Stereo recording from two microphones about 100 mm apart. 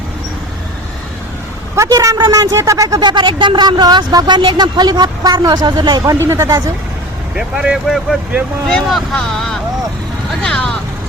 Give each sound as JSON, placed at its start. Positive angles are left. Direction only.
{"t": 1.9, "sound": "a woman's voice", "side_deg": -35}
{"t": 6.1, "sound": "speech", "side_deg": -25}
{"t": 7.3, "sound": "speech", "side_deg": -10}
{"t": 8.6, "sound": "speech", "side_deg": 5}